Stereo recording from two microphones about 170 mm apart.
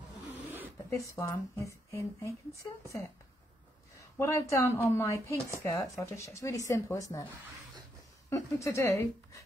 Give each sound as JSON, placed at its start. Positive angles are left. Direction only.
{"t": 0.3, "sound": "snake", "side_deg": -10}
{"t": 0.8, "sound": "a woman's voice", "side_deg": 15}
{"t": 4.2, "sound": "a woman's voice", "side_deg": 15}
{"t": 8.3, "sound": "speech", "side_deg": 15}